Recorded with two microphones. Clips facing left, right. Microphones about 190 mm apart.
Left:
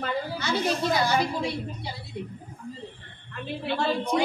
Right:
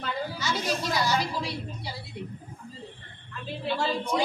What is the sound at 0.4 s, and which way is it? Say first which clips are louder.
A woman's voice: left 5 dB; 55° left (ahead or behind).